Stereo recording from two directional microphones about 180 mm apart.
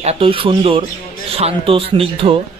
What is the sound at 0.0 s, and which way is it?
A man's voice, 35° right (ahead or behind).